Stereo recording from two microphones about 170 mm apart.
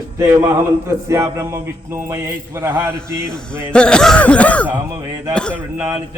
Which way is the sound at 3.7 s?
5° left (ahead or behind).